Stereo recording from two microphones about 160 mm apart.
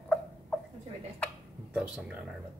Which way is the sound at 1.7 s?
5° right (ahead or behind).